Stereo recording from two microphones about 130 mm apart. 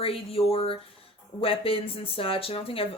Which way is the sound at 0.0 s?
45° left (ahead or behind).